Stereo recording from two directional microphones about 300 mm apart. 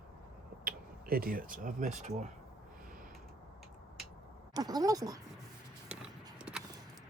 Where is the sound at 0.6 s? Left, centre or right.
Right.